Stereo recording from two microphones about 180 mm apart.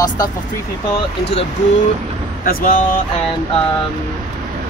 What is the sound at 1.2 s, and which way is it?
Speech, 35° left (ahead or behind).